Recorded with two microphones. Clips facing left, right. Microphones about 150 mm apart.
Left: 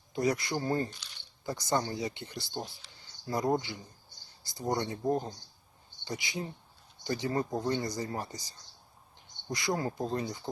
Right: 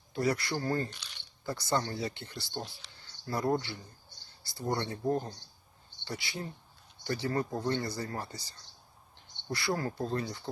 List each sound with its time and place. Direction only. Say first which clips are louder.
0.1 s speech: left 1 dB; 20° left (ahead or behind)